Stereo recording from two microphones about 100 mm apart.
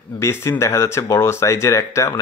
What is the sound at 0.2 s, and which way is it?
Speech, 30° left (ahead or behind).